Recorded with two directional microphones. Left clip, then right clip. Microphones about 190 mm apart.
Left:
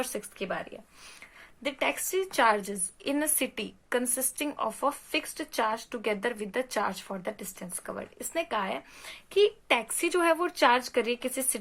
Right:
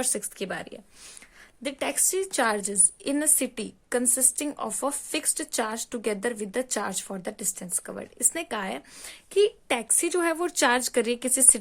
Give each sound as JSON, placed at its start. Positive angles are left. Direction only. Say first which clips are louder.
{"t": 0.0, "sound": "a woman's voice", "louder": "right 3 dB", "side_deg": -50}
{"t": 1.6, "sound": "a woman's voice", "louder": "right 1 dB", "side_deg": -45}